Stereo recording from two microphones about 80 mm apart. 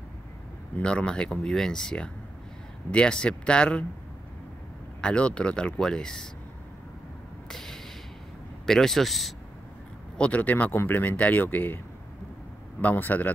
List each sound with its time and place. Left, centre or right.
0.7 s speech: centre
5.0 s speech: centre
7.4 s a sound: centre
8.6 s speech: centre
10.1 s speech: centre
12.8 s speech: left